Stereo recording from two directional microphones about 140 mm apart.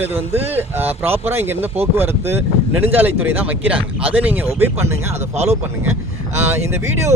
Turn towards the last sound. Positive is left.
turn(degrees=-20)  # may be behind; listen again after turning